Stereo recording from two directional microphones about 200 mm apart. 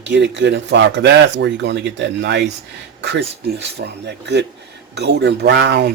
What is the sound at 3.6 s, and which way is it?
Speech, 60° right (ahead or behind).